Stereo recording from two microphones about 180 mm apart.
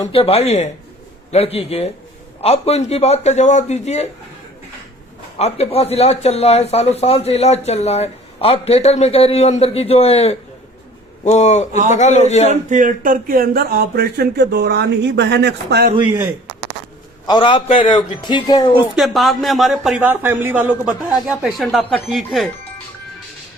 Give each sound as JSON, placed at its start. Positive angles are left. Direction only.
{"t": 0.1, "sound": "speech", "side_deg": 30}
{"t": 5.4, "sound": "speech", "side_deg": 35}
{"t": 12.5, "sound": "speech", "side_deg": -45}
{"t": 17.2, "sound": "speech", "side_deg": 25}
{"t": 18.9, "sound": "a man's voice", "side_deg": 0}